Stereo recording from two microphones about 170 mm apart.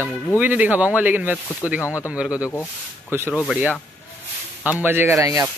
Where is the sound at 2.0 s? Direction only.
5° right (ahead or behind).